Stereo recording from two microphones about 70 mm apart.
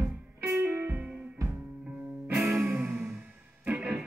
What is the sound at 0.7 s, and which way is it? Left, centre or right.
Music, right.